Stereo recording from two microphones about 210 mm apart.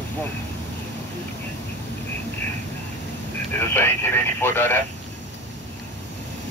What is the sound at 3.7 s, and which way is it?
Speech, 10° left (ahead or behind).